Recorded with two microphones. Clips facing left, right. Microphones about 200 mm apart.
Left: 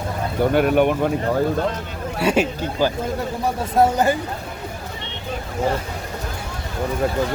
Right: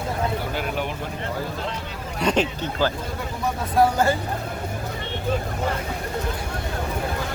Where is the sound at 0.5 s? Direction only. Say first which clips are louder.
Left 11 dB; 55° left (ahead or behind).